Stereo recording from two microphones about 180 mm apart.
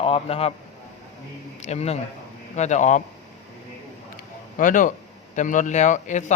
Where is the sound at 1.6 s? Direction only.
35° left (ahead or behind).